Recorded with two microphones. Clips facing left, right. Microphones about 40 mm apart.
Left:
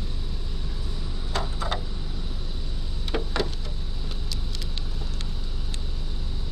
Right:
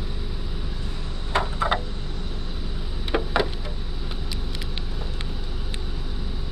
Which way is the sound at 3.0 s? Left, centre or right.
Right.